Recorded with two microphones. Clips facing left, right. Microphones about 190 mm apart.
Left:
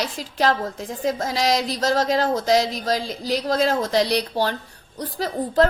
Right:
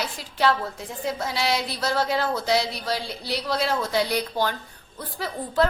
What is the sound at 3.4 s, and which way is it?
A woman's voice, 45° left (ahead or behind).